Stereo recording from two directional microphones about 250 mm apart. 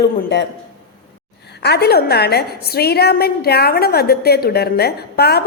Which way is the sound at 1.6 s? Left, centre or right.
Left.